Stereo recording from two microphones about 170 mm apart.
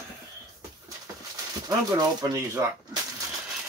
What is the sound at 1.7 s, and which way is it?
Speech, 20° right (ahead or behind).